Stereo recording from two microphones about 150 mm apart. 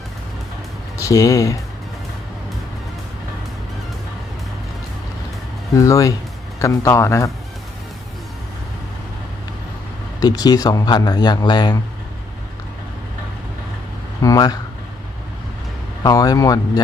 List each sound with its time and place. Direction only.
0.9 s speech: 20° left (ahead or behind)
5.7 s speech: 20° left (ahead or behind)
10.2 s speech: 25° left (ahead or behind)
14.2 s speech: 25° left (ahead or behind)
16.0 s speech: 25° left (ahead or behind)